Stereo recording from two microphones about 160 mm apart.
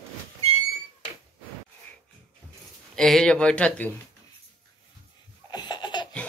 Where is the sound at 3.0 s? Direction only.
5° left (ahead or behind).